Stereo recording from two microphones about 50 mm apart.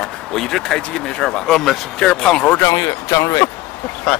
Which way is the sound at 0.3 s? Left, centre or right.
Centre.